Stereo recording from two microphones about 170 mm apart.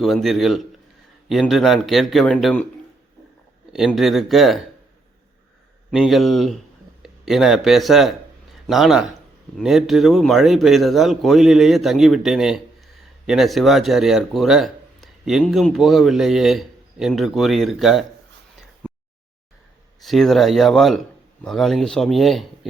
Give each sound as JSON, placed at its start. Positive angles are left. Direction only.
{"t": 0.0, "sound": "a man's voice", "side_deg": 0}
{"t": 3.7, "sound": "a man's voice", "side_deg": 0}
{"t": 5.9, "sound": "a man's voice", "side_deg": 0}
{"t": 20.0, "sound": "a man's voice", "side_deg": 0}